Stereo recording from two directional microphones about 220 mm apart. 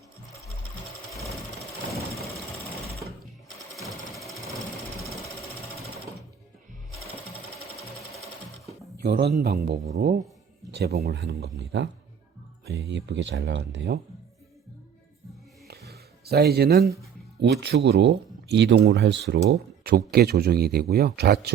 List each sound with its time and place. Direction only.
3.7 s jackhammer: centre (ahead or behind)
9.0 s speech: 45° right (ahead or behind)
15.6 s a sound: 45° right (ahead or behind)
17.4 s speech: 50° right (ahead or behind)